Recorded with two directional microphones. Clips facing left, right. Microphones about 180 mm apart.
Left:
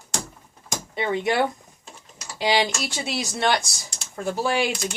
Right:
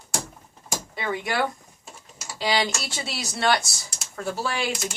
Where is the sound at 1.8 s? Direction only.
5° right (ahead or behind).